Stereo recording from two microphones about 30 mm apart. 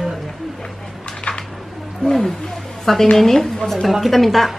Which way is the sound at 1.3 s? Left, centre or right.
Left.